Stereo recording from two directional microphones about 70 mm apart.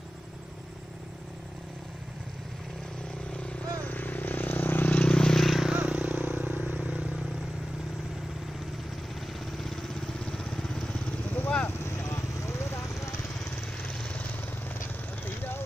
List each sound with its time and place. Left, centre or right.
3.8 s vehicle: left; by 5.7 s centre
5.7 s vehicle: centre
9.6 s vehicle: centre
11.6 s vehicle: left
13.9 s vehicle: centre
15.2 s vehicle: left